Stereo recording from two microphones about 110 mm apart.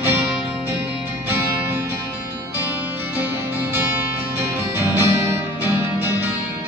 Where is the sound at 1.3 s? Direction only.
25° right (ahead or behind).